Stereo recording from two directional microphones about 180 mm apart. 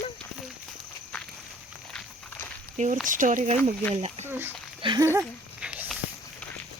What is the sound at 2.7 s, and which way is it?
Speech, 40° right (ahead or behind).